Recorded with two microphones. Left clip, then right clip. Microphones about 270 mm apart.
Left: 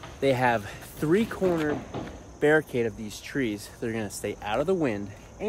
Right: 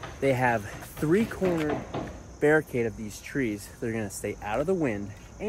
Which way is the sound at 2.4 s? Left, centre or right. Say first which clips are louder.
Left 1 dB; centre.